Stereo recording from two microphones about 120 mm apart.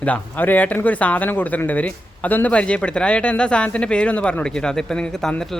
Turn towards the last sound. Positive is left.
turn(degrees=5)  # may be behind; listen again after turning